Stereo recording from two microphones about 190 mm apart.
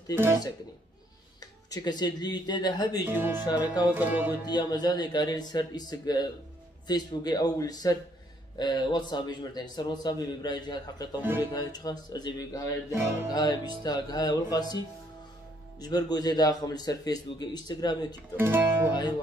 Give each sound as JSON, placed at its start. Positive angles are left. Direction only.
{"t": 0.1, "sound": "music", "side_deg": -10}
{"t": 1.4, "sound": "speech", "side_deg": 20}
{"t": 3.1, "sound": "music", "side_deg": -10}
{"t": 4.5, "sound": "a man's voice", "side_deg": 20}
{"t": 11.1, "sound": "music", "side_deg": -10}
{"t": 11.5, "sound": "a man's voice", "side_deg": 20}
{"t": 12.9, "sound": "music", "side_deg": -15}
{"t": 13.3, "sound": "a man's voice", "side_deg": 20}
{"t": 18.3, "sound": "speech", "side_deg": -10}